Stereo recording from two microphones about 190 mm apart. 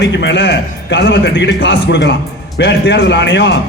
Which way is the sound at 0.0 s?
65° left (ahead or behind).